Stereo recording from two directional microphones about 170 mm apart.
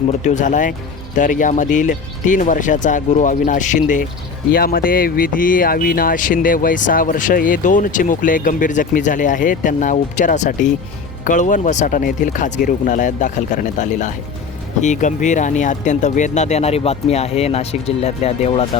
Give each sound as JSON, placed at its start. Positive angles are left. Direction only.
{"t": 0.2, "sound": "speech", "side_deg": 45}
{"t": 4.5, "sound": "speech", "side_deg": 60}